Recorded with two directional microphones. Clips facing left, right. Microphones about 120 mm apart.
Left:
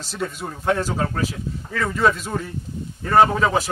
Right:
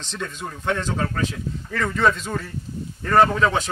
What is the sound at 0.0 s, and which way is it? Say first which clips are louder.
A man's voice: left 3 dB; 5° left (ahead or behind).